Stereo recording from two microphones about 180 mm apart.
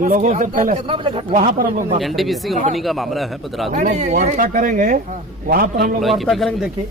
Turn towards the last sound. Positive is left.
turn(degrees=0)  # may be behind; listen again after turning